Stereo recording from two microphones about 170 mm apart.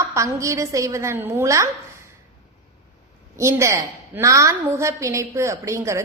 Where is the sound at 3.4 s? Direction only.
15° right (ahead or behind).